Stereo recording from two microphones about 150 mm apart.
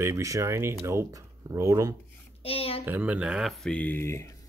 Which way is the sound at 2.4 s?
40° left (ahead or behind).